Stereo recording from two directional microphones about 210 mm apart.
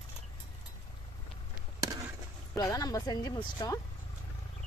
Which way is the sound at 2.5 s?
15° left (ahead or behind).